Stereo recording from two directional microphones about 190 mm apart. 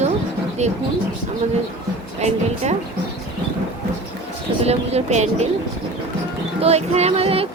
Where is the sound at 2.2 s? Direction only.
35° right (ahead or behind).